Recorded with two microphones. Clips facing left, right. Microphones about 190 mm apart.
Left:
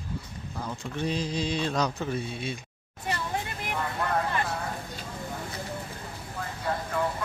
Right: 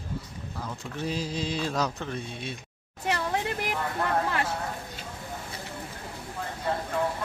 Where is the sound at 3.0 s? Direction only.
80° right.